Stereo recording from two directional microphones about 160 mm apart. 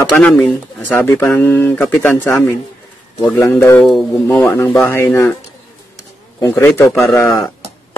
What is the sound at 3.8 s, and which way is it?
Speech, centre (ahead or behind).